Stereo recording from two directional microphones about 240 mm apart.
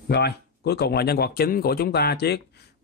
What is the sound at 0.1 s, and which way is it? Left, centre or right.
A man's voice, left.